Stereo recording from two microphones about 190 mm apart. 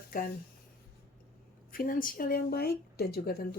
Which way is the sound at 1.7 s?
50° left (ahead or behind).